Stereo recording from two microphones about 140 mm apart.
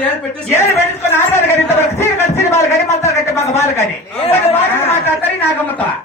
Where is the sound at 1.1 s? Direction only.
20° left (ahead or behind).